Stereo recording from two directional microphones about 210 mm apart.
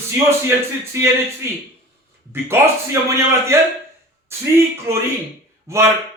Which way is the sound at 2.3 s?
15° right (ahead or behind).